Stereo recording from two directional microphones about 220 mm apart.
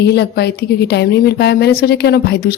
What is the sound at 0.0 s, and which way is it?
A woman's voice, 50° left (ahead or behind).